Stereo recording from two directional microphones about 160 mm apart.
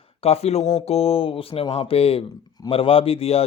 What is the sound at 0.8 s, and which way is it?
Speech, 40° left (ahead or behind).